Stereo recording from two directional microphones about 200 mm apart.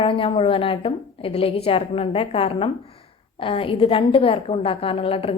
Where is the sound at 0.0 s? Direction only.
25° left (ahead or behind).